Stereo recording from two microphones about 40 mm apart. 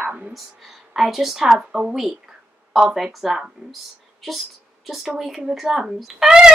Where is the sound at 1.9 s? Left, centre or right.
Centre.